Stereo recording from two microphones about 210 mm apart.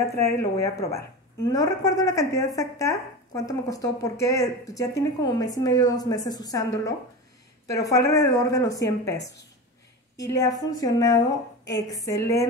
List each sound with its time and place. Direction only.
0.4 s speech: 15° left (ahead or behind)
10.1 s speech: 15° left (ahead or behind)